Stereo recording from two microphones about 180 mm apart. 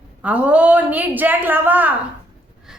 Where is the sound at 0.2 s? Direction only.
10° right (ahead or behind).